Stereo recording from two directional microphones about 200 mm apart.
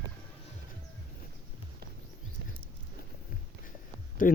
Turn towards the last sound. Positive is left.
turn(degrees=45)  # may be behind; listen again after turning